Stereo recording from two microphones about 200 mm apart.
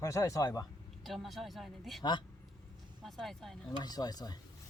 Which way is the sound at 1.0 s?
Centre (ahead or behind).